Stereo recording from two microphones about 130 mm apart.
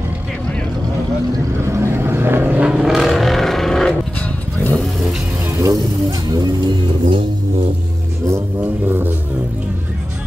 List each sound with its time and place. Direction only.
1.7 s vehicle: 20° right (ahead or behind); by 3.9 s 5° left (ahead or behind)
5.6 s vehicle: 25° right (ahead or behind)
8.8 s music: 15° right (ahead or behind)